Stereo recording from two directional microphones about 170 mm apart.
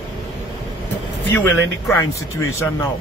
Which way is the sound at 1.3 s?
15° left (ahead or behind).